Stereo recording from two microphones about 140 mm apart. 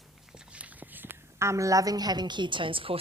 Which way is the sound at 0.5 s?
10° right (ahead or behind).